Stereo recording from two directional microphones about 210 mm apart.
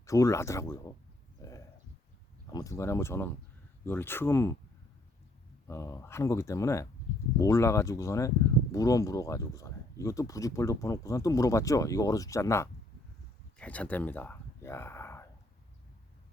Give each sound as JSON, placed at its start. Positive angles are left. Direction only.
{"t": 0.0, "sound": "speech", "side_deg": 15}
{"t": 1.4, "sound": "a sound", "side_deg": 15}
{"t": 2.5, "sound": "speech", "side_deg": 15}
{"t": 5.6, "sound": "speech", "side_deg": 15}